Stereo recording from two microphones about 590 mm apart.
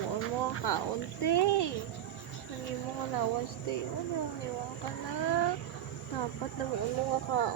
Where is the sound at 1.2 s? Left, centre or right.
Left.